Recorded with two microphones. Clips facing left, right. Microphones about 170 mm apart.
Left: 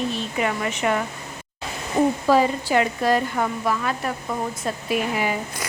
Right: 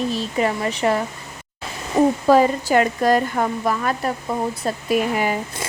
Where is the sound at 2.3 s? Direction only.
45° right (ahead or behind).